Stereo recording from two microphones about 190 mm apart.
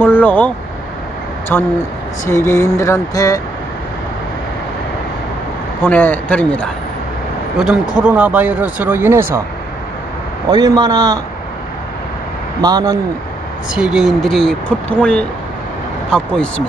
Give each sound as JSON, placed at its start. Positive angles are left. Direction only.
{"t": 0.0, "sound": "speech", "side_deg": 10}
{"t": 1.5, "sound": "a sound", "side_deg": 10}
{"t": 5.8, "sound": "a sound", "side_deg": 10}
{"t": 7.5, "sound": "speech", "side_deg": -5}
{"t": 10.5, "sound": "a man's voice", "side_deg": -20}
{"t": 12.6, "sound": "a man's voice", "side_deg": -20}
{"t": 13.7, "sound": "speech", "side_deg": -5}